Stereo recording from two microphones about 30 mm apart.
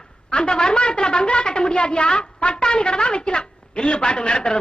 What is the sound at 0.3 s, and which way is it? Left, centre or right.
A woman's voice, left.